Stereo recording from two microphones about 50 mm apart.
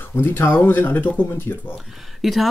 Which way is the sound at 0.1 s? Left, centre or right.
Left.